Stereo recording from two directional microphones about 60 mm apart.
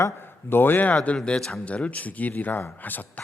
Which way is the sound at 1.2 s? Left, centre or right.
Centre.